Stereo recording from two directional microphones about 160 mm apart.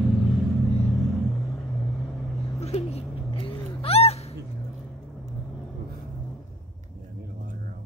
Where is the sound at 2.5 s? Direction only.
40° left (ahead or behind).